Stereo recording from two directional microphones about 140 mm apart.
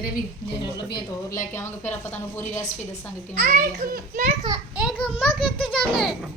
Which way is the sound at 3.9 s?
85° right.